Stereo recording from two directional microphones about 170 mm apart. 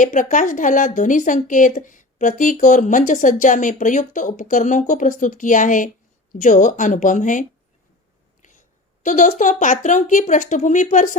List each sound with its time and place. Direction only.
0.0 s a woman's voice: 50° left (ahead or behind)
8.4 s a sound: 50° left (ahead or behind)
9.0 s a woman's voice: 50° left (ahead or behind)